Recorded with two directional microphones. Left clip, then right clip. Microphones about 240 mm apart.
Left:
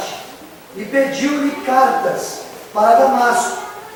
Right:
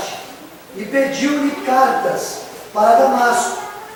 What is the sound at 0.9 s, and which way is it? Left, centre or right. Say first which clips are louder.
Speech: left 1 dB; centre.